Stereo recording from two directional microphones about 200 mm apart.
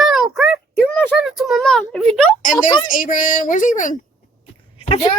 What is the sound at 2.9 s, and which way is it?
Speech, 40° left (ahead or behind).